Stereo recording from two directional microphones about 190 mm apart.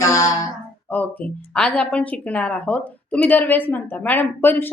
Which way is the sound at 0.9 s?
5° left (ahead or behind).